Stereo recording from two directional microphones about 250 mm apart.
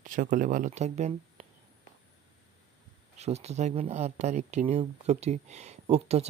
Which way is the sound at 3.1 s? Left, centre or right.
Right.